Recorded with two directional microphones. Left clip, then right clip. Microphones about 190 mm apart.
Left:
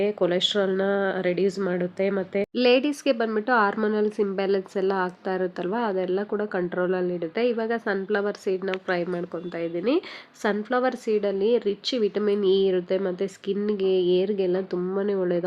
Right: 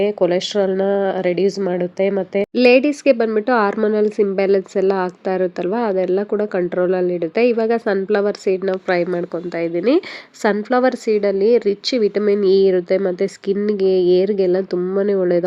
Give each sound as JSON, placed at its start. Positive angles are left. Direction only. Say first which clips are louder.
{"t": 0.0, "sound": "speech", "louder": "right 6 dB", "side_deg": -15}